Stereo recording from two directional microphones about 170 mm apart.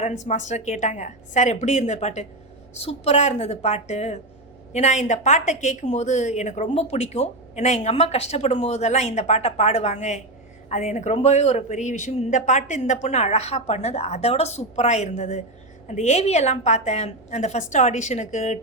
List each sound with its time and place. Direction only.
0.0 s a woman's voice: 45° left (ahead or behind)